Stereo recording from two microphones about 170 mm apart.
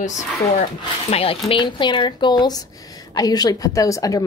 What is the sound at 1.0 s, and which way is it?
Speech, 35° left (ahead or behind).